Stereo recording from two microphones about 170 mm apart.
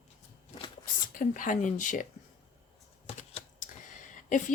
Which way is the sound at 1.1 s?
50° left (ahead or behind).